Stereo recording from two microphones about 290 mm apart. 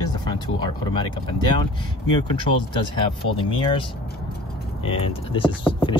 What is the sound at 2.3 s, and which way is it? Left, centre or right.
Speech, centre.